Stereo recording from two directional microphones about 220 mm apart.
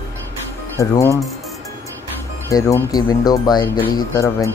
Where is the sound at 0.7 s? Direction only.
15° left (ahead or behind).